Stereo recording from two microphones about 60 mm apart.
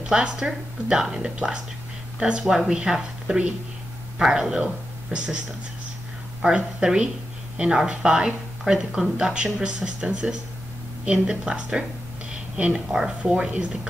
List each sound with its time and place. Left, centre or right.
0.0 s a woman's voice: centre
2.4 s speech: centre
6.4 s speech: centre